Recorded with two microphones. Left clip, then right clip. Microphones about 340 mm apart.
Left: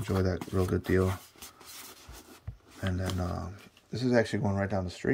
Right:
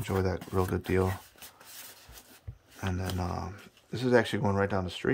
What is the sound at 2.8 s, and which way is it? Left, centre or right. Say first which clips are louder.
Speech: left 1 dB; centre.